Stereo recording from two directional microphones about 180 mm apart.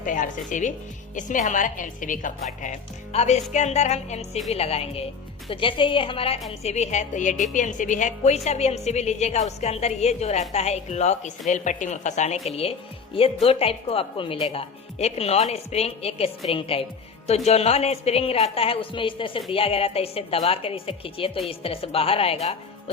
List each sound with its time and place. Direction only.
0.0 s a woman's voice: 45° left (ahead or behind)